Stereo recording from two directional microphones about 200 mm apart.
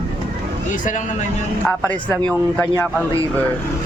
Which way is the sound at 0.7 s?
40° left (ahead or behind).